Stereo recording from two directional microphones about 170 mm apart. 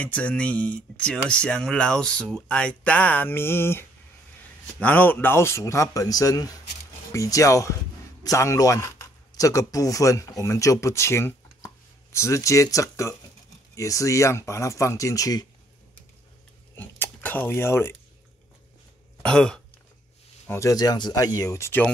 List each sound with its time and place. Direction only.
0.0 s speech: 10° left (ahead or behind)
16.7 s cutlery: 10° left (ahead or behind)
19.2 s throat clearing: 5° left (ahead or behind)
20.4 s speech: 15° left (ahead or behind)